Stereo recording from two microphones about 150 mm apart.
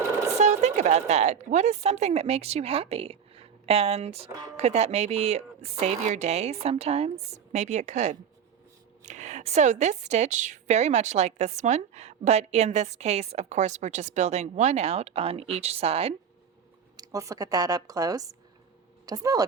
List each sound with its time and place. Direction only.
0.3 s a woman's voice: 50° right (ahead or behind)
17.0 s speech: 20° right (ahead or behind)